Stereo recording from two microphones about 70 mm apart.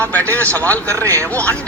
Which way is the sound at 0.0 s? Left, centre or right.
Left.